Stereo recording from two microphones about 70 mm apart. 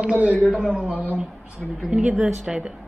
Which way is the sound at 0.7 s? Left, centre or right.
Centre.